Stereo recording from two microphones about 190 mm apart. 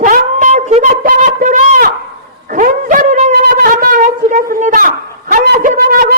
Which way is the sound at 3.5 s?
50° right (ahead or behind).